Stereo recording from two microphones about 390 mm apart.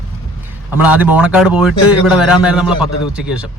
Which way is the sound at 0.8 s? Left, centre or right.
Centre.